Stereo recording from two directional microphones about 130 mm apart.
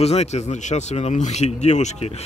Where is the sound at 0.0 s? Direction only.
55° left (ahead or behind).